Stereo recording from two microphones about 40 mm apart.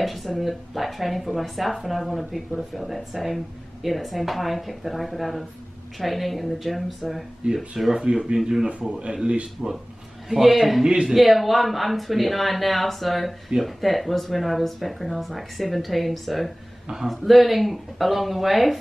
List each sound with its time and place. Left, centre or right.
0.0 s speech: centre
7.9 s speech: centre
10.3 s a man's voice: centre